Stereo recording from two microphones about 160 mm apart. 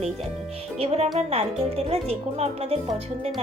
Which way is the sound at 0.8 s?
40° right (ahead or behind).